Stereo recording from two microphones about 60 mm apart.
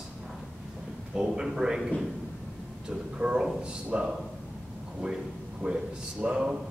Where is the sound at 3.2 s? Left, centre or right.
Centre.